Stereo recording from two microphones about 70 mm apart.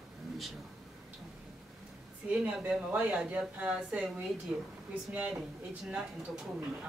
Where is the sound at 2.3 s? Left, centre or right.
Centre.